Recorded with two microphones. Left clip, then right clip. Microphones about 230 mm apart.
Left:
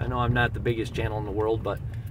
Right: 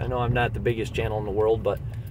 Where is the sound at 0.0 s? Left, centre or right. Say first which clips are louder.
Right 1 dB; centre.